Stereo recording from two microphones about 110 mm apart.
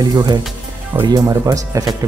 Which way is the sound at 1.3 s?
30° right (ahead or behind).